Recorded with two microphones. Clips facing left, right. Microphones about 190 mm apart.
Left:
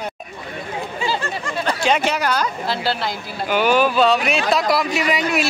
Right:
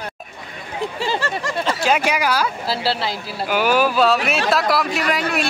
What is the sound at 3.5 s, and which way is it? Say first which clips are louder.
Speech: left 1 dB; 5° right (ahead or behind).